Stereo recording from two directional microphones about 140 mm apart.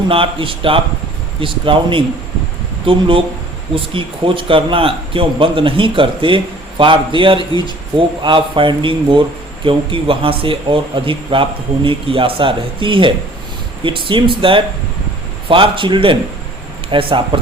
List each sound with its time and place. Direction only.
0.1 s speech: 40° right (ahead or behind)